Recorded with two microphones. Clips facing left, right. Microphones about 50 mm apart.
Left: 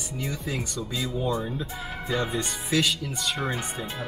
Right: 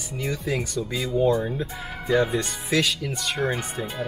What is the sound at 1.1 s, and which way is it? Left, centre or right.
Speech, right.